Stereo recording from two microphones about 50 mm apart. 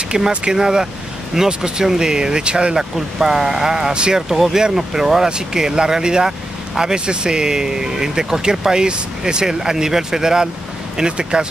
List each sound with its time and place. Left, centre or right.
0.1 s speech: centre